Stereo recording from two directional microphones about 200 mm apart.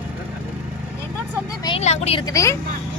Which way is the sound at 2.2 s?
15° left (ahead or behind).